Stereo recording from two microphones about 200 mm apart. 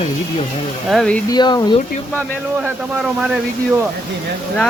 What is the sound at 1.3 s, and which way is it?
Speech, 20° left (ahead or behind).